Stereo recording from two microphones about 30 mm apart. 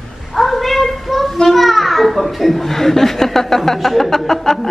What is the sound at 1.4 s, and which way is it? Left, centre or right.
A child's voice, centre.